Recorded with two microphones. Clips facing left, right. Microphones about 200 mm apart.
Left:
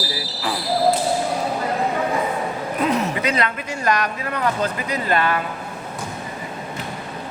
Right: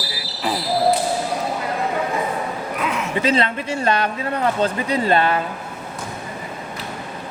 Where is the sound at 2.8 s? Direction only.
35° left (ahead or behind).